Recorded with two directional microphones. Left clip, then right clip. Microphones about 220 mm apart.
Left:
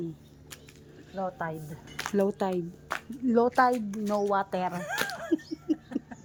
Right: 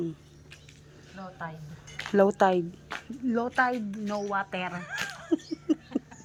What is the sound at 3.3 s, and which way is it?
Speech, 15° left (ahead or behind).